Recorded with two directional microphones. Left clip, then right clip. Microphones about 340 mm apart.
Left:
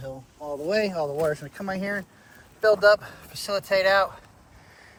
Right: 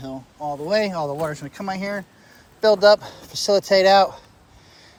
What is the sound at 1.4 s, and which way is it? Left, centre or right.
Speech, right.